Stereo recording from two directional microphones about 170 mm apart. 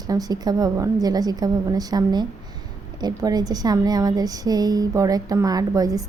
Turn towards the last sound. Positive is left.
turn(degrees=-20)  # may be behind; listen again after turning